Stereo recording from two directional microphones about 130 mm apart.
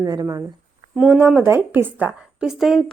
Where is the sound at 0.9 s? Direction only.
15° right (ahead or behind).